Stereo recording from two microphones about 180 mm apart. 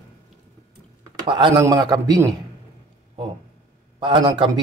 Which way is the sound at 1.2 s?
25° right (ahead or behind).